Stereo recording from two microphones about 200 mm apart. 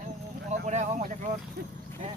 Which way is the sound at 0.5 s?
40° right (ahead or behind).